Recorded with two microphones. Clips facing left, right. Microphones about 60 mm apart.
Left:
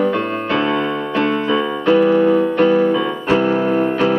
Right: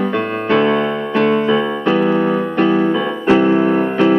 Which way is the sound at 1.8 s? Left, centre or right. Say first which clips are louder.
Left 5 dB; centre.